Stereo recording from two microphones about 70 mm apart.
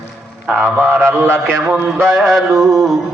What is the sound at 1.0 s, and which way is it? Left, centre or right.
A man's voice, right.